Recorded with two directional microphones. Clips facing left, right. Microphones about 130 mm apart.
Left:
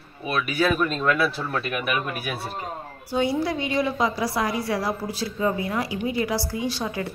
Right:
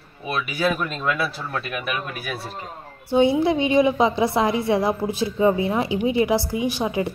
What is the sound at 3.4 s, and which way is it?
A woman's voice, 20° right (ahead or behind).